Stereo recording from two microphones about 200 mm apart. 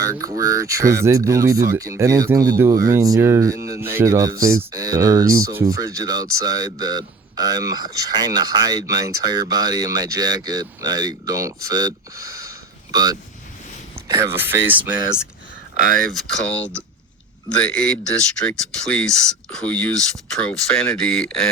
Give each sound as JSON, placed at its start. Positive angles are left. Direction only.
{"t": 0.1, "sound": "speech", "side_deg": -15}
{"t": 16.1, "sound": "speech", "side_deg": 5}